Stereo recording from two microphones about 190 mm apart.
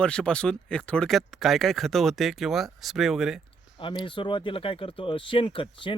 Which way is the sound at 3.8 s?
25° left (ahead or behind).